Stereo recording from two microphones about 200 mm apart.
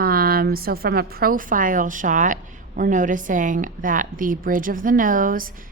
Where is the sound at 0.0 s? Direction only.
50° right (ahead or behind).